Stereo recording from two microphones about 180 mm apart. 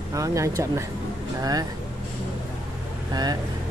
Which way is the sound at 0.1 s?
15° right (ahead or behind).